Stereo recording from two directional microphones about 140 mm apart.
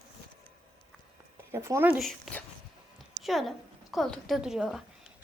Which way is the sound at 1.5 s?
20° right (ahead or behind).